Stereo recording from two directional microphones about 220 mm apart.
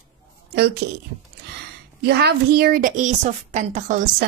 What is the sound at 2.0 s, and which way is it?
A woman's voice, 45° right (ahead or behind).